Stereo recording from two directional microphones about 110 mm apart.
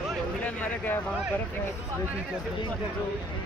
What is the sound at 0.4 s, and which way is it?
Speech, 15° left (ahead or behind).